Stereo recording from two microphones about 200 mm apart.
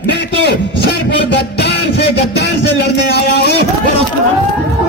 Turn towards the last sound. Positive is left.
turn(degrees=55)  # may be behind; listen again after turning